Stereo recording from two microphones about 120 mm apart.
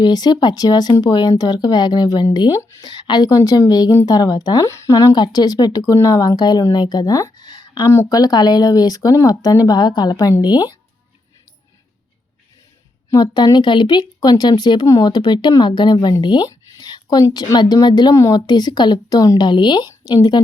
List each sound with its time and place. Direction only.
0.0 s speech: 35° left (ahead or behind)
13.1 s speech: 35° left (ahead or behind)
19.9 s speech: 25° left (ahead or behind)